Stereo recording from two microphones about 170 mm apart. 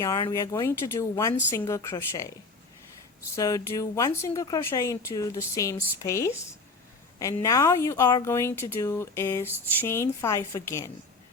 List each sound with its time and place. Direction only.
0.0 s speech: 20° left (ahead or behind)
3.3 s speech: 20° left (ahead or behind)